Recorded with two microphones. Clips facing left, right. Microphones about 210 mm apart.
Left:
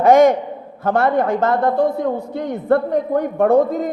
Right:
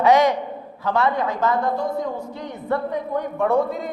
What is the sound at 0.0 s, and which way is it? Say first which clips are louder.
A man's voice: left 5 dB; 50° left (ahead or behind).